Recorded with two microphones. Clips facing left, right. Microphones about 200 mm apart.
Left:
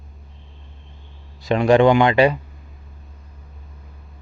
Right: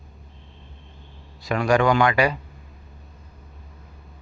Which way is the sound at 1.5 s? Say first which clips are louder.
Left 6 dB; 25° left (ahead or behind).